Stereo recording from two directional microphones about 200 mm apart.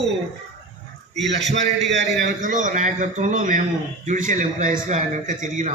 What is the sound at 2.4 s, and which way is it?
A man's voice, 40° right (ahead or behind).